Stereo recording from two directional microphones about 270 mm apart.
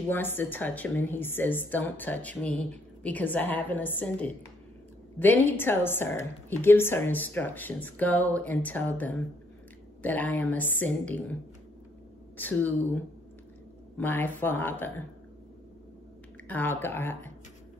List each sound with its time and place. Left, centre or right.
0.1 s a woman's voice: centre
12.4 s a woman's voice: centre
16.4 s a woman's voice: centre